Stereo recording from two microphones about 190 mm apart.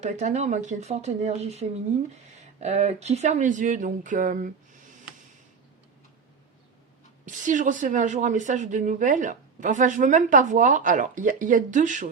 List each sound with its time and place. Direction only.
0.0 s a woman's voice: 35° right (ahead or behind)
7.3 s a woman's voice: 40° right (ahead or behind)